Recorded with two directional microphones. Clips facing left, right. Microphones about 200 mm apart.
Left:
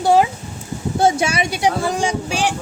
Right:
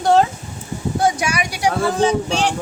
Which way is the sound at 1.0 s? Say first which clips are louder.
Left 3 dB; 25° left (ahead or behind).